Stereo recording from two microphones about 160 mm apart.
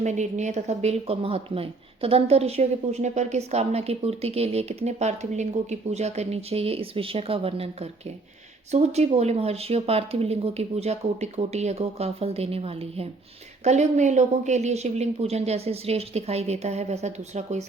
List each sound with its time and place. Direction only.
0.0 s speech: 45° right (ahead or behind)